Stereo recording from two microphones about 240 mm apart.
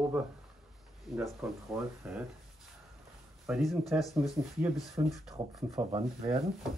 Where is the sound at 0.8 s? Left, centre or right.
Centre.